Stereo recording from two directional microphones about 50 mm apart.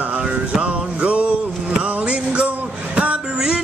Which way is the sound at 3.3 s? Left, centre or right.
Centre.